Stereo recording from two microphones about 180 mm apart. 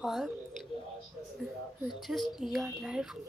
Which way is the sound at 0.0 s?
Centre (ahead or behind).